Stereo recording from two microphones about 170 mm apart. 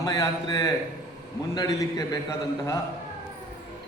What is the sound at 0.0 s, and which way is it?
A man's voice, 20° left (ahead or behind).